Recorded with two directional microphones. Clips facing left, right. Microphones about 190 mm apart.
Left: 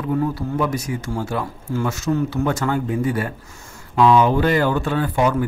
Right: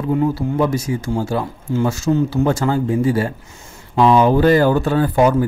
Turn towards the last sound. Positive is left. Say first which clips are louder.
# right 5 dB
turn(degrees=-40)  # may be behind; listen again after turning